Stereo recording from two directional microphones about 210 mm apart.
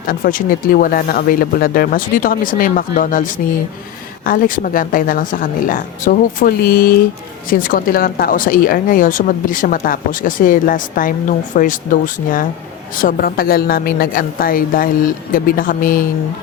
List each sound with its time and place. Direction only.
0.1 s a woman's voice: 40° left (ahead or behind)